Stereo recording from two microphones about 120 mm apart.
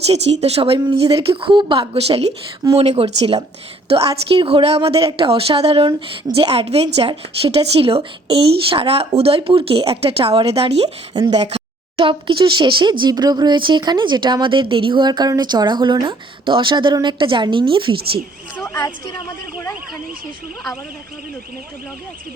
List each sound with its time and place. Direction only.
0.1 s speech: 60° right (ahead or behind)
11.1 s speech: 35° right (ahead or behind)
11.3 s speech: 60° right (ahead or behind); by 17.9 s 45° right (ahead or behind)
18.6 s speech: 25° left (ahead or behind)